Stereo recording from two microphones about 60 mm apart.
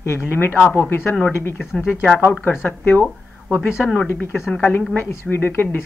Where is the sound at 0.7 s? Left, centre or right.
Left.